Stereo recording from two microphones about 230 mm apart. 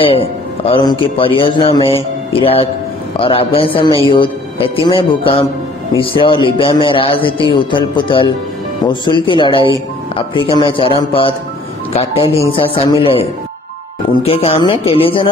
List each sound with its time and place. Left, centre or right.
0.0 s a man's voice: left